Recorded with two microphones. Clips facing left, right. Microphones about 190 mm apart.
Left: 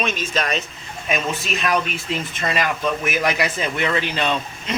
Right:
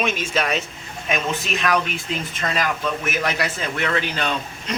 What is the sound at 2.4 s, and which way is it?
A man's voice, 10° left (ahead or behind).